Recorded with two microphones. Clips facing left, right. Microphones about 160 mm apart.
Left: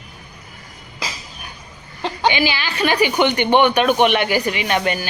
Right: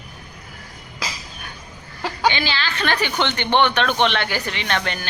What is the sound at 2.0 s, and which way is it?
A woman's voice, 20° left (ahead or behind).